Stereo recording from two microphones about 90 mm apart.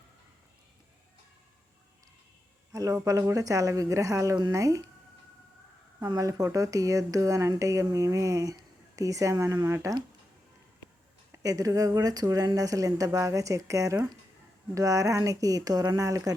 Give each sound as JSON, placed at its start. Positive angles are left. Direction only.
{"t": 2.7, "sound": "speech", "side_deg": -40}
{"t": 6.1, "sound": "speech", "side_deg": -40}
{"t": 11.3, "sound": "speech", "side_deg": -40}